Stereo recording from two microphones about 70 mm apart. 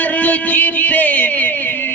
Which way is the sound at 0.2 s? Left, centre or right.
Left.